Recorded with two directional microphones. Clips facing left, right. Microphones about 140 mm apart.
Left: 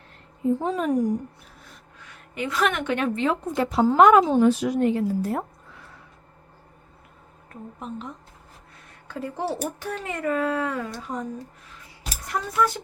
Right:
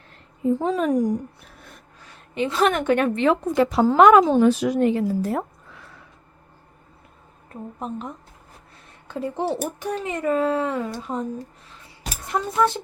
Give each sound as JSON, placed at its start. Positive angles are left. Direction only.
{"t": 0.6, "sound": "a woman's voice", "side_deg": -90}
{"t": 2.0, "sound": "a woman's voice", "side_deg": -30}
{"t": 3.2, "sound": "a woman's voice", "side_deg": -85}
{"t": 7.8, "sound": "speech", "side_deg": -50}
{"t": 9.0, "sound": "speech", "side_deg": -20}